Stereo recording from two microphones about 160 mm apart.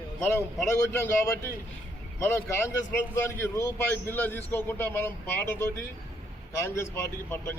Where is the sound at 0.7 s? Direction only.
15° left (ahead or behind).